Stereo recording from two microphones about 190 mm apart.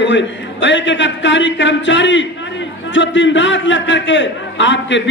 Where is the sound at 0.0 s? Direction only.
70° left (ahead or behind).